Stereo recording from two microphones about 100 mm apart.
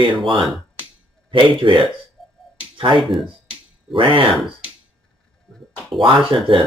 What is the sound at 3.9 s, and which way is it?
Speech, 60° right (ahead or behind).